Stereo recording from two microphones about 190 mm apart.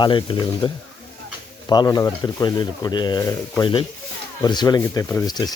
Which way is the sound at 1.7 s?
20° left (ahead or behind).